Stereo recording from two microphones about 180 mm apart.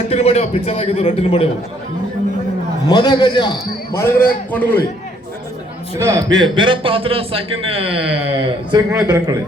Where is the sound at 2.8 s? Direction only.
20° left (ahead or behind).